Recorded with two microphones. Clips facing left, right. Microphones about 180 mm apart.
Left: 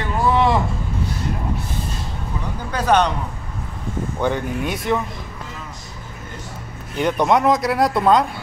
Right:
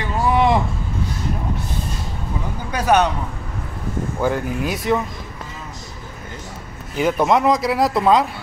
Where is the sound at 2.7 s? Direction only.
10° right (ahead or behind).